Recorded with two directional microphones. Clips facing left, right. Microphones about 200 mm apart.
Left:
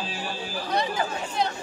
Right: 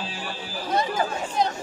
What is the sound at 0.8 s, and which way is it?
Chatter, 45° right (ahead or behind).